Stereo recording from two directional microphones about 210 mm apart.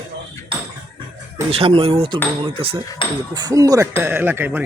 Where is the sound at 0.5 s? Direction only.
25° right (ahead or behind).